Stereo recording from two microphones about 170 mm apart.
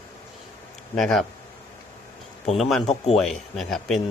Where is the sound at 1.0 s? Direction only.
Centre (ahead or behind).